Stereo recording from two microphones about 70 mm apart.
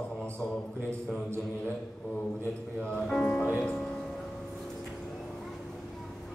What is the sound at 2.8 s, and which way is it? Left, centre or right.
Speech, centre.